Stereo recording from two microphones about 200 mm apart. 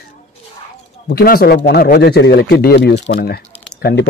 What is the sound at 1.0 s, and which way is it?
A man's voice, 50° left (ahead or behind).